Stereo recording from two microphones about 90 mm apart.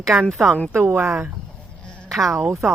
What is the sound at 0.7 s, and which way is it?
Speech, 25° right (ahead or behind).